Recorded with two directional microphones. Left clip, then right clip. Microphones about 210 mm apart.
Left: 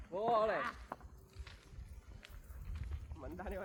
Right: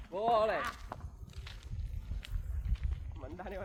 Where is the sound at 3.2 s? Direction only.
15° right (ahead or behind).